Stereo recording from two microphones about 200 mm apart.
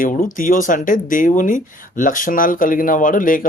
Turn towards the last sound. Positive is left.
turn(degrees=40)  # may be behind; listen again after turning